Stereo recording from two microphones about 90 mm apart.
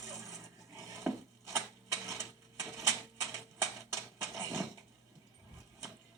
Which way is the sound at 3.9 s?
30° right (ahead or behind).